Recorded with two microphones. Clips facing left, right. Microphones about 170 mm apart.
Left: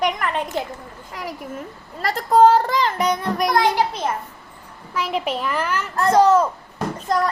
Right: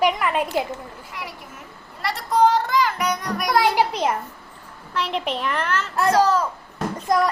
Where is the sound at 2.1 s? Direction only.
45° left (ahead or behind).